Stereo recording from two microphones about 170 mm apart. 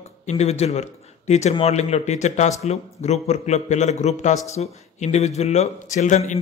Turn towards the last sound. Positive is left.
turn(degrees=45)  # may be behind; listen again after turning